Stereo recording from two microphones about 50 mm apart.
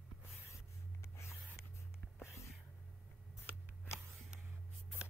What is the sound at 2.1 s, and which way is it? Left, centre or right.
Whispering, left.